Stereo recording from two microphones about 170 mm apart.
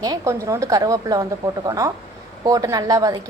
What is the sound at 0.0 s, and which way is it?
A woman's voice, 20° right (ahead or behind).